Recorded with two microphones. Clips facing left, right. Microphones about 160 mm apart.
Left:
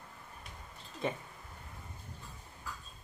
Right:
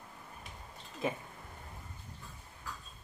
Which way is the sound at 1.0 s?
5° right (ahead or behind).